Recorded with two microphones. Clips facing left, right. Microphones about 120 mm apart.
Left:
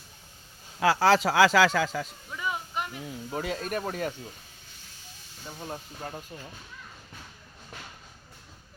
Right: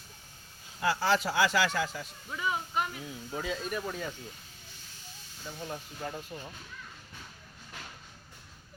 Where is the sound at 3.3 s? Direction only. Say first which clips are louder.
Left 3 dB; 65° left (ahead or behind).